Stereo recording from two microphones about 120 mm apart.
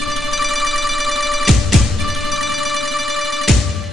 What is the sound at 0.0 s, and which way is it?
Music, centre (ahead or behind).